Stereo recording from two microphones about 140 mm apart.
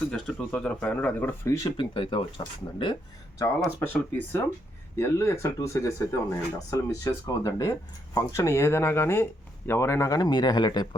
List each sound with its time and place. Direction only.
0.1 s speech: 5° left (ahead or behind)
1.6 s speech: 35° left (ahead or behind)
3.8 s speech: 15° left (ahead or behind); by 10.8 s 30° left (ahead or behind)